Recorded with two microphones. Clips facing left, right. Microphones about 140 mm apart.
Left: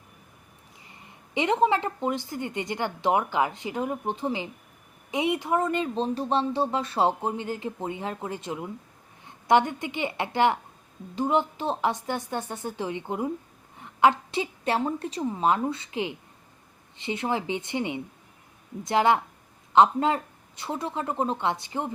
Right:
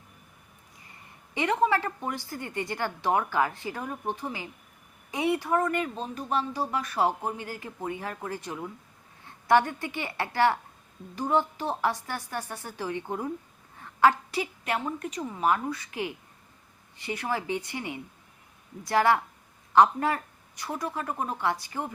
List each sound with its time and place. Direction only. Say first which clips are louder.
0.9 s a woman's voice: left 2 dB; 20° left (ahead or behind)